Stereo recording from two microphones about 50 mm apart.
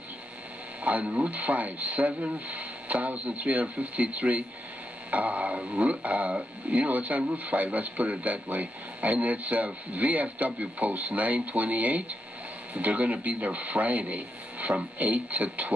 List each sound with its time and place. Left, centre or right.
0.8 s speech: right